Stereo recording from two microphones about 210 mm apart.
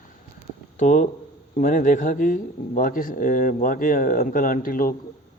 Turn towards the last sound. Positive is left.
turn(degrees=40)  # may be behind; listen again after turning